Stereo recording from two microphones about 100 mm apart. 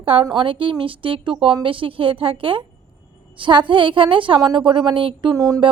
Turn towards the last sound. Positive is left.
turn(degrees=-35)  # may be behind; listen again after turning